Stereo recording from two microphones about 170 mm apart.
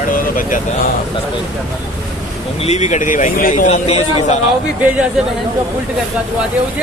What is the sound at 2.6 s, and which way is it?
A man's voice, 40° left (ahead or behind).